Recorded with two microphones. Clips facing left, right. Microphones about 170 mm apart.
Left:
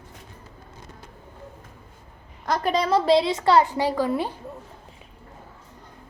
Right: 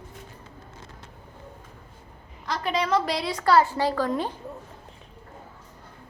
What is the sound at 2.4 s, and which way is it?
A woman's voice, 45° left (ahead or behind).